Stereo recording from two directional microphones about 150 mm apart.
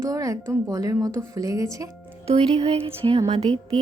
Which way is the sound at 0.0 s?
20° right (ahead or behind).